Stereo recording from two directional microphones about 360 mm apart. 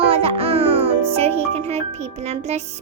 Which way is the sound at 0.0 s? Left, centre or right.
Centre.